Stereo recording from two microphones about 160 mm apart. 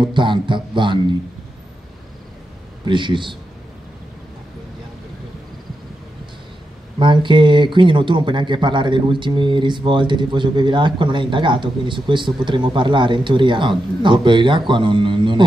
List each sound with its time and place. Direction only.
0.0 s speech: 30° right (ahead or behind)
2.8 s speech: 30° right (ahead or behind)
7.0 s speech: 30° right (ahead or behind)